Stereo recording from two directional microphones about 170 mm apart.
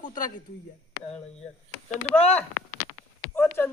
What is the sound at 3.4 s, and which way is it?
Speech, 10° left (ahead or behind).